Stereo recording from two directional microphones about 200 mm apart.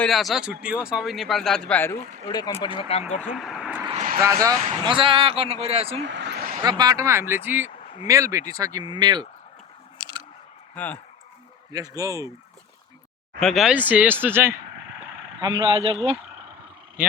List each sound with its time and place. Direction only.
0.0 s speech: centre (ahead or behind)
2.2 s speech: 20° left (ahead or behind)
3.3 s vehicle: centre (ahead or behind)
3.9 s vehicle: 40° right (ahead or behind)
4.2 s speech: 15° right (ahead or behind)
6.1 s vehicle: 60° right (ahead or behind)
6.6 s speech: 20° right (ahead or behind)
10.0 s scissors: 25° right (ahead or behind)
10.8 s speech: 10° left (ahead or behind)
11.7 s speech: 20° right (ahead or behind)
13.4 s speech: centre (ahead or behind)
15.4 s speech: 20° right (ahead or behind)